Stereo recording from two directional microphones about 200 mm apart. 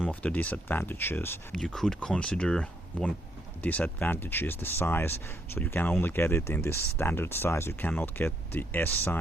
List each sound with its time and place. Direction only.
0.1 s speech: 5° left (ahead or behind)